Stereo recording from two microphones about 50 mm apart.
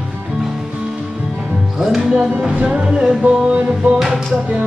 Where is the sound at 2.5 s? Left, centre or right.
Right.